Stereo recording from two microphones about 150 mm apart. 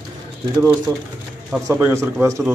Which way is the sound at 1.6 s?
20° right (ahead or behind).